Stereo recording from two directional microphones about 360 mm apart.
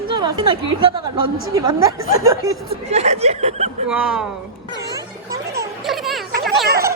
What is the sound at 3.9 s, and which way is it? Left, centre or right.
Speech, centre.